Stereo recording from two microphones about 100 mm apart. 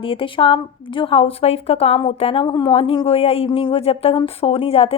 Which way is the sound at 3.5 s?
60° left (ahead or behind).